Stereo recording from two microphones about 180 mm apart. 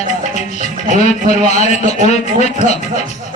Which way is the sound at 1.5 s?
40° left (ahead or behind).